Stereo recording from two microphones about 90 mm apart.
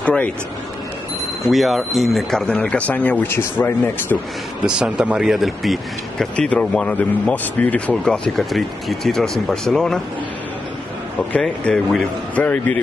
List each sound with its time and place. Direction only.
0.0 s a sound: 15° left (ahead or behind)
1.5 s speech: centre (ahead or behind); by 4.2 s 25° left (ahead or behind)
4.6 s speech: 10° right (ahead or behind)
6.3 s speech: 10° left (ahead or behind)
11.3 s speech: 10° left (ahead or behind)